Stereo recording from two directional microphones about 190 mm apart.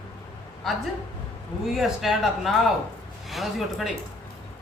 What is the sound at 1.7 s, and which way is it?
A woman's voice, centre (ahead or behind).